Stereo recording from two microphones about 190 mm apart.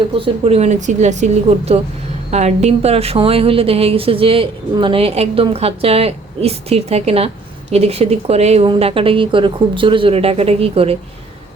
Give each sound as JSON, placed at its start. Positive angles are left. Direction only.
{"t": 0.4, "sound": "a woman's voice", "side_deg": -35}